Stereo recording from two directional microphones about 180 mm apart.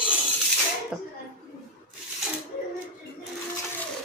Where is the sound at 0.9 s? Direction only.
5° right (ahead or behind).